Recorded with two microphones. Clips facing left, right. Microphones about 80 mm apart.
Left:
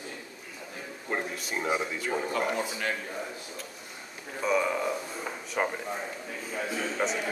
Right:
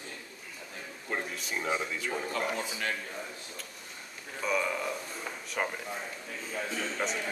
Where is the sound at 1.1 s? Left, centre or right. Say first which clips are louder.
Left 3 dB; centre.